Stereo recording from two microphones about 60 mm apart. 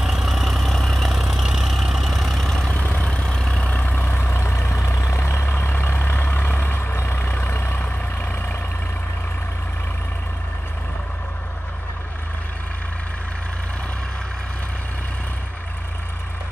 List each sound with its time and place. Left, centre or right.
0.0 s vehicle: centre
2.7 s vehicle: left
3.8 s vehicle: left
4.7 s vehicle: left